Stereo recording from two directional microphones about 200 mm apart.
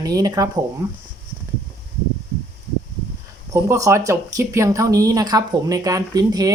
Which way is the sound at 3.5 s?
15° right (ahead or behind).